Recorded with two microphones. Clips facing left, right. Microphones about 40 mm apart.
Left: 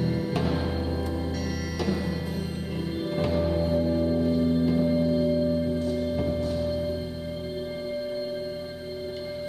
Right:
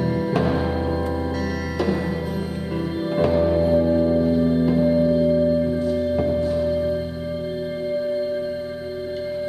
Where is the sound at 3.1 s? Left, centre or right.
Right.